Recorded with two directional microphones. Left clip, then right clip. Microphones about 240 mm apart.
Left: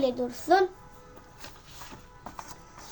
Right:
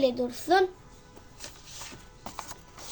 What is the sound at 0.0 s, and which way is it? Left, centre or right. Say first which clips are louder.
Speech: right 1 dB; centre.